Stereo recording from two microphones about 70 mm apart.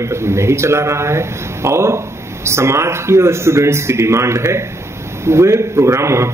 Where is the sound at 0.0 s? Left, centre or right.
Right.